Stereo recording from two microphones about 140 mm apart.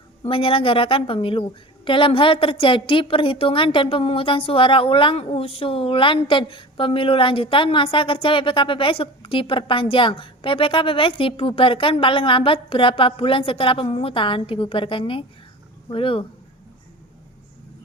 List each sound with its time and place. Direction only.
0.3 s a woman's voice: 40° left (ahead or behind)